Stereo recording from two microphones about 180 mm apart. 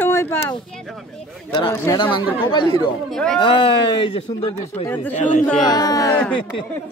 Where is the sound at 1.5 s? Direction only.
25° left (ahead or behind).